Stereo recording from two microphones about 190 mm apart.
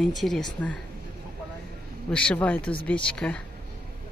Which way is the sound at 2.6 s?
25° left (ahead or behind).